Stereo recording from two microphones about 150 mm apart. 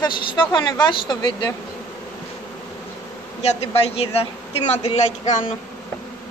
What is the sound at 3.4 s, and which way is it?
Speech, 45° left (ahead or behind).